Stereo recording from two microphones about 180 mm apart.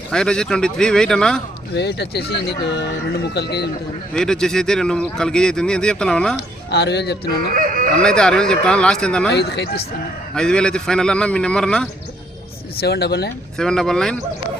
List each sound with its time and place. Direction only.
0.1 s speech: 5° left (ahead or behind)
1.7 s speech: 70° left (ahead or behind)
4.1 s speech: 5° left (ahead or behind)
6.7 s speech: 65° left (ahead or behind)
7.5 s dog: 50° right (ahead or behind)
8.0 s speech: 5° left (ahead or behind)
9.3 s speech: 65° left (ahead or behind)
10.3 s speech: 5° left (ahead or behind)
12.8 s speech: 65° left (ahead or behind)
13.6 s speech: 5° left (ahead or behind)